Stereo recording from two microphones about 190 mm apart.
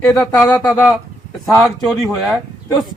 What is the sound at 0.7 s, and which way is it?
Speech, 15° left (ahead or behind).